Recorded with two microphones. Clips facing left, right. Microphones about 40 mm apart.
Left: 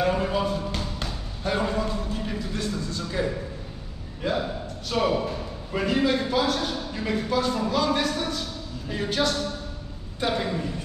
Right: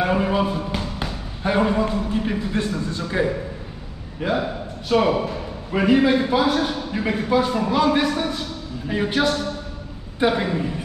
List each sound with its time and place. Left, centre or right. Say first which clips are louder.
0.0 s a man's voice: right 4 dB; right